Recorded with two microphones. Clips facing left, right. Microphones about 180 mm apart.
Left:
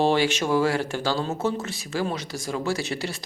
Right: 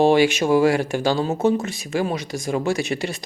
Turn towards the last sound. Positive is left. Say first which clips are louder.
# right 4 dB
turn(degrees=-15)  # may be behind; listen again after turning